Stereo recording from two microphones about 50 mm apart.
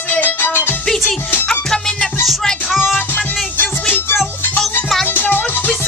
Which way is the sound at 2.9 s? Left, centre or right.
Left.